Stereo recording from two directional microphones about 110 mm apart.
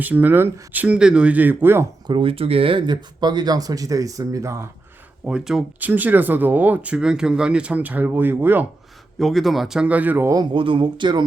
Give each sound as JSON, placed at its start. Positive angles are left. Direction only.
{"t": 0.0, "sound": "speech", "side_deg": -15}
{"t": 2.0, "sound": "speech", "side_deg": -55}
{"t": 5.2, "sound": "speech", "side_deg": -5}
{"t": 9.1, "sound": "speech", "side_deg": 0}
{"t": 10.3, "sound": "speech", "side_deg": -50}